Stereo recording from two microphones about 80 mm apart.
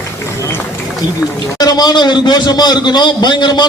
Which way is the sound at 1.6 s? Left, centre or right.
Left.